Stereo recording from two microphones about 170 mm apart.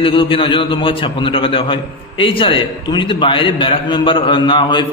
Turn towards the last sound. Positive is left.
turn(degrees=30)  # may be behind; listen again after turning